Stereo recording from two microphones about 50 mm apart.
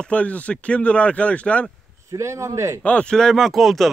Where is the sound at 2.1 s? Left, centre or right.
Right.